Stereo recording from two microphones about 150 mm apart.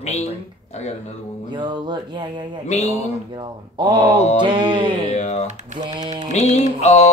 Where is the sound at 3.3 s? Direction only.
30° right (ahead or behind).